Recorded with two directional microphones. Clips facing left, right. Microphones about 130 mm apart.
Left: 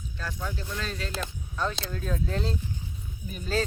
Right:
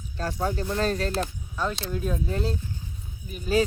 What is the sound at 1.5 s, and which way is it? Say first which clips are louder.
Speech: right 2 dB; 5° right (ahead or behind).